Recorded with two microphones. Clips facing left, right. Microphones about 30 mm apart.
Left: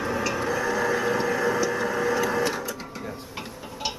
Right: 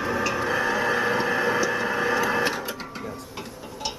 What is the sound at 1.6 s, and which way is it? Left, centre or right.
Printer, right.